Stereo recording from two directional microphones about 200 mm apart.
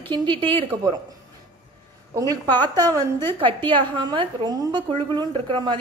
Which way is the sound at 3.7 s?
25° right (ahead or behind).